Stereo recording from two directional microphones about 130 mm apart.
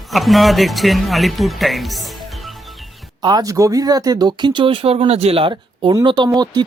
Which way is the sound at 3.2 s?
30° right (ahead or behind).